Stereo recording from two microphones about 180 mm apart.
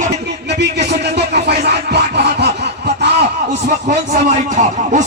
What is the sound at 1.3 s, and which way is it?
Music, 65° right (ahead or behind).